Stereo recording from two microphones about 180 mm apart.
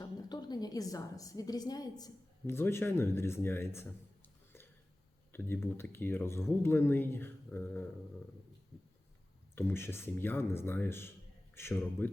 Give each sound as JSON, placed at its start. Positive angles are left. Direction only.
{"t": 0.0, "sound": "a woman's voice", "side_deg": 25}
{"t": 9.6, "sound": "speech", "side_deg": 10}